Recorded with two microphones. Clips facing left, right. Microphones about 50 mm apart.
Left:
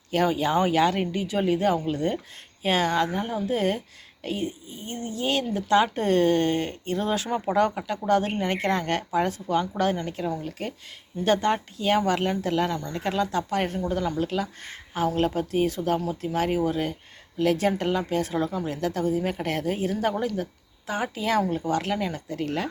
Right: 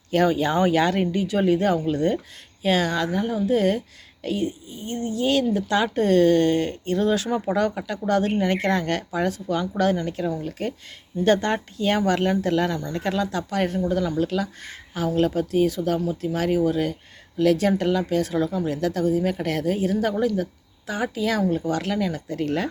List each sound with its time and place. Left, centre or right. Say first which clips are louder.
0.1 s speech: right 3 dB; centre
2.6 s speech: right 1 dB; left
14.6 s speech: left 1 dB; left
22.3 s speech: right 3 dB; centre